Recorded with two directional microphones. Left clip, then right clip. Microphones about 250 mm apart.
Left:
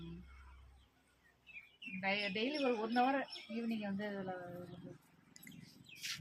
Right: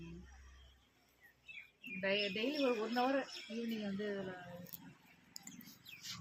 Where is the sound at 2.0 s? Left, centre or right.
Left.